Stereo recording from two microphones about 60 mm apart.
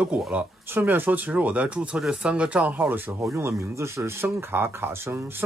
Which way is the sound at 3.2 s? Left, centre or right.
Right.